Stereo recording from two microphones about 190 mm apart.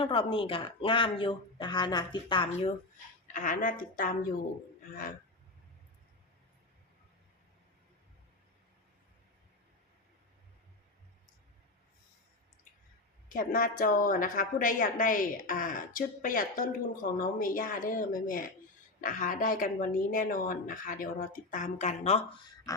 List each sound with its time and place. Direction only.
0.0 s a woman's voice: 25° left (ahead or behind); by 4.4 s 45° left (ahead or behind)
13.2 s a woman's voice: 45° left (ahead or behind)